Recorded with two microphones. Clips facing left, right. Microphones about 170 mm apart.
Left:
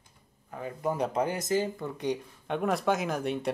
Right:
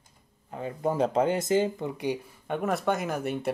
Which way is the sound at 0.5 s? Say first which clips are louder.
Right 3 dB; 25° right (ahead or behind).